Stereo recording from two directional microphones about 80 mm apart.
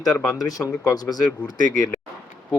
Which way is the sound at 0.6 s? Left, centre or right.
Left.